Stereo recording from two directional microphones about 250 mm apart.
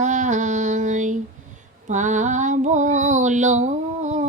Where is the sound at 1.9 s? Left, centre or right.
Right.